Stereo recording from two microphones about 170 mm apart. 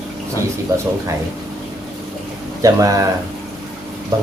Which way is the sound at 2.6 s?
20° right (ahead or behind).